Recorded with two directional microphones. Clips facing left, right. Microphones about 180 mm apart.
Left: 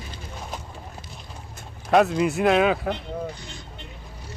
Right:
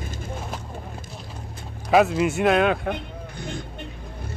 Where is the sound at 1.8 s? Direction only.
Centre (ahead or behind).